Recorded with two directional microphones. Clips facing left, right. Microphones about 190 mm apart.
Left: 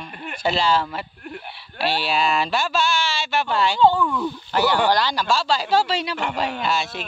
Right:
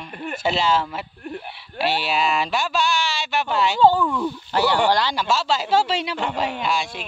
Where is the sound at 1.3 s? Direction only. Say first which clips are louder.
Right 4 dB; 25° right (ahead or behind).